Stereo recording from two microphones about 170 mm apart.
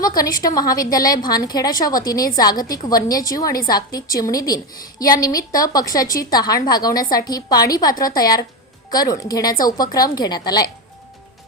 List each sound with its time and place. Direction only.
0.0 s a woman's voice: 20° left (ahead or behind)